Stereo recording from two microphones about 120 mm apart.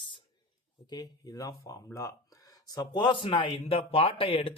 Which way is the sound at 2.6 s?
35° left (ahead or behind).